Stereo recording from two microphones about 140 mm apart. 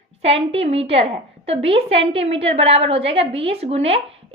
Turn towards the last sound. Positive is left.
turn(degrees=-45)  # may be behind; listen again after turning